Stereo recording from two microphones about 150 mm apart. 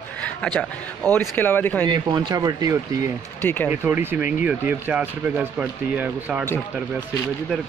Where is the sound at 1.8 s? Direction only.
25° right (ahead or behind).